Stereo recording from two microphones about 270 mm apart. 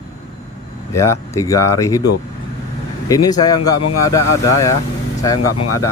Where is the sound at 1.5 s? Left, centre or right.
Left.